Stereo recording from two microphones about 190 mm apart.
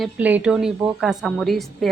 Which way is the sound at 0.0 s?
10° right (ahead or behind).